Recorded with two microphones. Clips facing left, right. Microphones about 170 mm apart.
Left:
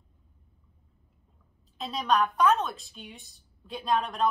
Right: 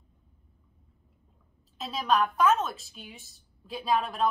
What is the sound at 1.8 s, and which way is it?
A woman's voice, centre (ahead or behind).